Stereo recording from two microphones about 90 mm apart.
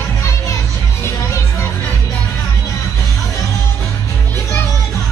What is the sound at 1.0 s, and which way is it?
Music, 30° left (ahead or behind).